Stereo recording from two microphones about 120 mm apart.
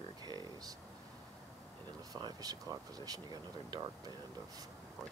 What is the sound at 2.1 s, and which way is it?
Speech, 30° right (ahead or behind).